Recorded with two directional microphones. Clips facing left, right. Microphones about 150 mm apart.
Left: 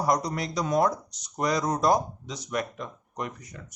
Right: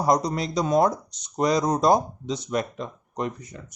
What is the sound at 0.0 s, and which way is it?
Speech, 20° right (ahead or behind).